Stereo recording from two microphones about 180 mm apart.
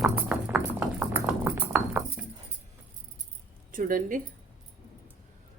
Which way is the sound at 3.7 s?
50° right (ahead or behind).